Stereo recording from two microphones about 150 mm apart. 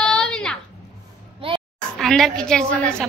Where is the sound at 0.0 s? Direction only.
5° left (ahead or behind).